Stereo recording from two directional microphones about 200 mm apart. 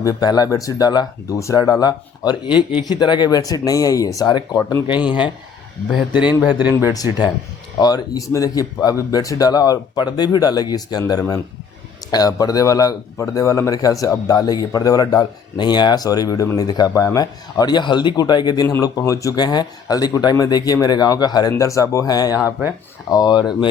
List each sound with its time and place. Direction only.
0.0 s speech: 20° left (ahead or behind)
4.9 s a man's voice: 5° right (ahead or behind)
6.9 s a man's voice: 20° left (ahead or behind)